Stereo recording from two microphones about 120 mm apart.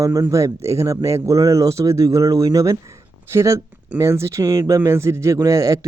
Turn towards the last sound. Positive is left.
turn(degrees=-25)  # may be behind; listen again after turning